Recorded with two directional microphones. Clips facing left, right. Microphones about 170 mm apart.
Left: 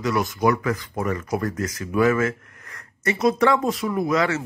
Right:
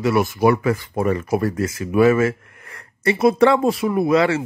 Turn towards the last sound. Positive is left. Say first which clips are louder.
# right 5 dB
turn(degrees=-30)  # may be behind; listen again after turning